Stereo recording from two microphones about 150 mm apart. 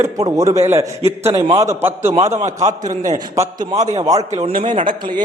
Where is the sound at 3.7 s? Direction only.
45° right (ahead or behind).